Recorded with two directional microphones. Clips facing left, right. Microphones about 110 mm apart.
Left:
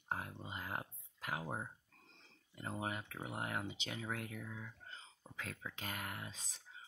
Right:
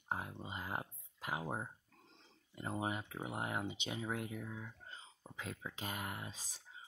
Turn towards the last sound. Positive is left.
turn(degrees=-15)  # may be behind; listen again after turning